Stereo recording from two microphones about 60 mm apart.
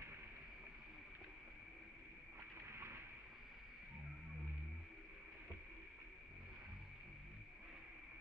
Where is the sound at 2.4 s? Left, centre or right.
Right.